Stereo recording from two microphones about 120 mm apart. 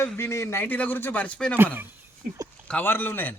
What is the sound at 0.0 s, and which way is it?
A man's voice, 20° left (ahead or behind).